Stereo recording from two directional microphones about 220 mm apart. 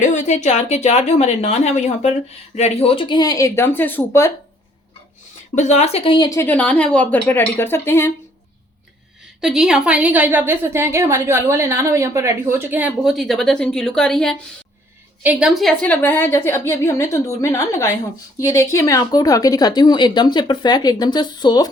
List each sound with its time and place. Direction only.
0.0 s a woman's voice: 35° left (ahead or behind); by 4.3 s 10° left (ahead or behind)
5.5 s a woman's voice: 30° left (ahead or behind); by 8.1 s 10° left (ahead or behind)
9.4 s a woman's voice: centre (ahead or behind); by 21.7 s 20° left (ahead or behind)